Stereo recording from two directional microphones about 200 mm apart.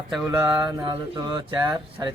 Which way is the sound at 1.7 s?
20° right (ahead or behind).